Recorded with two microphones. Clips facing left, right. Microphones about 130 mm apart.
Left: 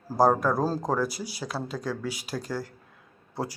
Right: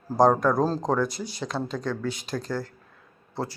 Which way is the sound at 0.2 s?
5° left (ahead or behind).